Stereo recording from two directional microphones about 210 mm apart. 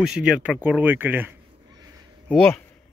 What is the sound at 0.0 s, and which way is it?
Speech, 5° right (ahead or behind).